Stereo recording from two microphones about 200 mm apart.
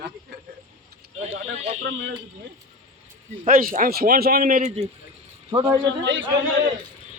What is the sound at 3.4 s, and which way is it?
A man's voice, 45° right (ahead or behind).